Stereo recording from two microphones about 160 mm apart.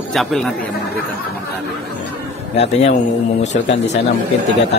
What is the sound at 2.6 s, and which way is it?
Speech, 40° left (ahead or behind).